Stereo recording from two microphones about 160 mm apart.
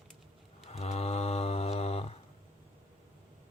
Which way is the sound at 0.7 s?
40° left (ahead or behind).